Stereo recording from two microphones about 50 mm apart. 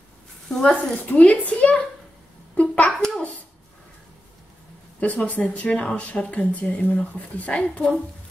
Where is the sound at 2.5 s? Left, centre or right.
Left.